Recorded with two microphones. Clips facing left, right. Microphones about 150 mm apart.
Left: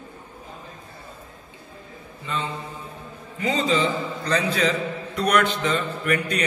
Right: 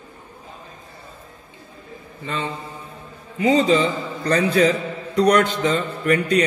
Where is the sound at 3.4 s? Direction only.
45° right (ahead or behind).